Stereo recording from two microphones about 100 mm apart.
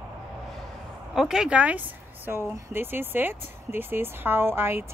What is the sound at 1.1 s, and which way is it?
Speech, 5° right (ahead or behind).